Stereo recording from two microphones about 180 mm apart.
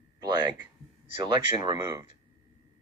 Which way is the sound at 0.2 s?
20° right (ahead or behind).